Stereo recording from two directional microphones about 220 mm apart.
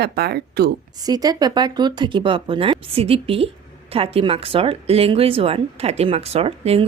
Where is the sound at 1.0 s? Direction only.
15° right (ahead or behind).